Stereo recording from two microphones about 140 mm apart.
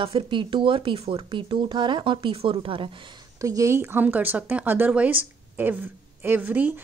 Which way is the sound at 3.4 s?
25° right (ahead or behind).